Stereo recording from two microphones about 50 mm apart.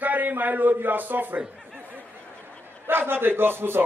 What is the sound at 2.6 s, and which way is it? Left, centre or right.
A man's voice, right.